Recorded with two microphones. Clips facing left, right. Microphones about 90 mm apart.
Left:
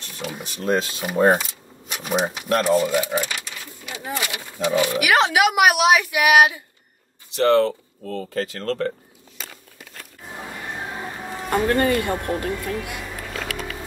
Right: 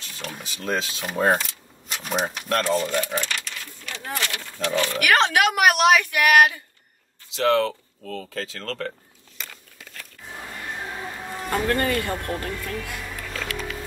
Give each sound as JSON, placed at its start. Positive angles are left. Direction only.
{"t": 0.0, "sound": "speech", "side_deg": 5}
{"t": 10.8, "sound": "music", "side_deg": 15}
{"t": 11.7, "sound": "speech", "side_deg": 25}